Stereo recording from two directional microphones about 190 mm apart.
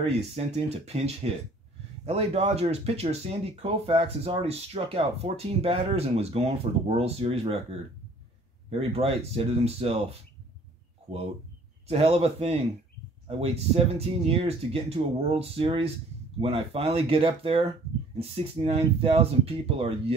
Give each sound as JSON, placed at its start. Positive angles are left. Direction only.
{"t": 0.0, "sound": "speech", "side_deg": -35}
{"t": 8.6, "sound": "speech", "side_deg": -30}